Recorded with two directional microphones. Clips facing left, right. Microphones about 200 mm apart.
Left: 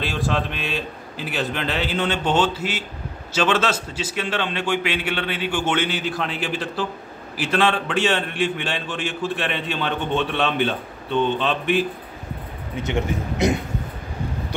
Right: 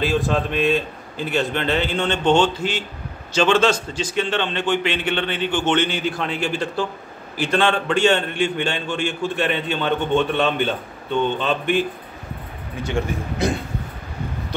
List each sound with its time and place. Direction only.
0.0 s a man's voice: centre (ahead or behind)
12.7 s a man's voice: 20° left (ahead or behind)